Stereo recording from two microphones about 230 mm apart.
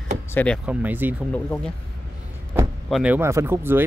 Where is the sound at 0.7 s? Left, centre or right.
Centre.